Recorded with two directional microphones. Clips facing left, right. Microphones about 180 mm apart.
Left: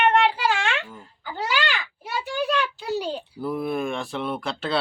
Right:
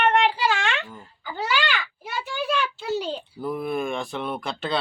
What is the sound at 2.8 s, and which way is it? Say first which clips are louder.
A child's voice: even; 10° left (ahead or behind).